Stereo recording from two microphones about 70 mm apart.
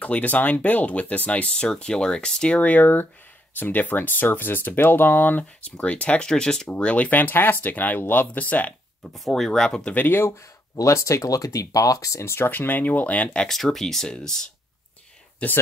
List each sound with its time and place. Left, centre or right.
0.0 s speech: left
9.1 s speech: centre
9.9 s speech: left
10.8 s speech: left; by 15.6 s centre